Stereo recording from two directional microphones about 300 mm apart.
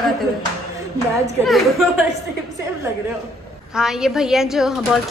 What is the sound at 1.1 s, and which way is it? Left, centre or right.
Speech, centre.